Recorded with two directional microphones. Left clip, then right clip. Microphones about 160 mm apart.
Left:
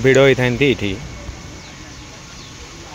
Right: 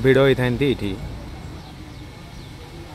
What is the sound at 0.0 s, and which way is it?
Speech, 5° left (ahead or behind).